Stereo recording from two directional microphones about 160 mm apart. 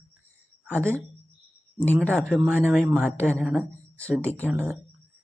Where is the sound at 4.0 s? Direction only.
10° left (ahead or behind).